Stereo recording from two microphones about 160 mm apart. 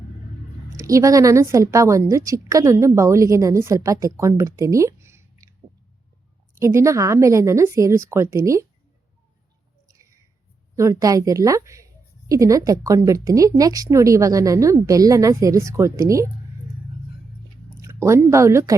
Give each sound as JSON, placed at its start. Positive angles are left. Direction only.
{"t": 0.8, "sound": "a woman's voice", "side_deg": -20}
{"t": 6.5, "sound": "a woman's voice", "side_deg": -15}
{"t": 9.9, "sound": "a sound", "side_deg": -20}
{"t": 10.8, "sound": "a woman's voice", "side_deg": -20}
{"t": 17.7, "sound": "speech", "side_deg": -20}